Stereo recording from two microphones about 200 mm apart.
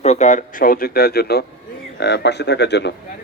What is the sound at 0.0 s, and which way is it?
A man's voice, 35° left (ahead or behind).